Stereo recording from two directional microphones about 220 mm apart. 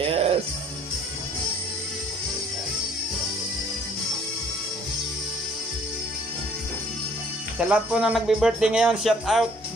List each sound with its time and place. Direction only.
0.0 s music: 25° right (ahead or behind)
7.5 s speech: 5° right (ahead or behind)